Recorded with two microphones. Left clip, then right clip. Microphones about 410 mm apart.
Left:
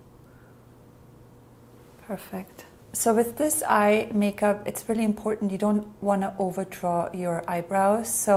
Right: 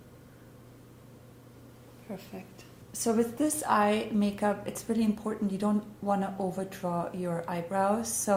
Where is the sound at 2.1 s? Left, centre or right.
Left.